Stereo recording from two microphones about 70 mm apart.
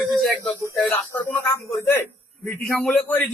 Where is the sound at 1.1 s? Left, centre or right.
Left.